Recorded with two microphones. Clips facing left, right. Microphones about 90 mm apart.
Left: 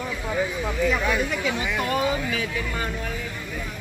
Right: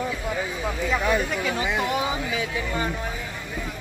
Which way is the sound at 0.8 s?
20° right (ahead or behind).